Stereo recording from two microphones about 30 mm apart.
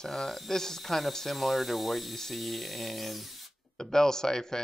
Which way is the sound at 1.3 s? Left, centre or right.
Centre.